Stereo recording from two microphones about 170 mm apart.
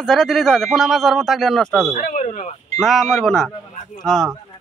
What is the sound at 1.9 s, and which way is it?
Speech, 45° left (ahead or behind).